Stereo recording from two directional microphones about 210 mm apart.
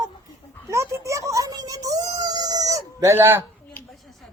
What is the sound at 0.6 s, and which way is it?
A child's voice, 15° right (ahead or behind).